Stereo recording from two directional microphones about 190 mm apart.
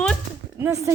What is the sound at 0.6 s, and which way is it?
Speech, 15° right (ahead or behind).